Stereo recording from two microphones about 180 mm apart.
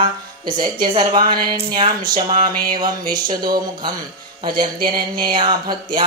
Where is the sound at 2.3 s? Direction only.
50° right (ahead or behind).